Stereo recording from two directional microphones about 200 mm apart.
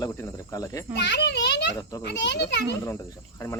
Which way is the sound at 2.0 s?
60° left (ahead or behind).